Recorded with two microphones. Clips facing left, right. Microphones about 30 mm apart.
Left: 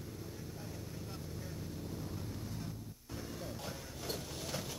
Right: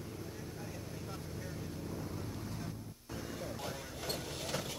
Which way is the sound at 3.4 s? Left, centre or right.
Centre.